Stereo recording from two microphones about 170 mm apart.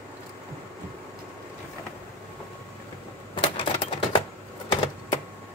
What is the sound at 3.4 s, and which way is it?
Typewriter, 30° left (ahead or behind).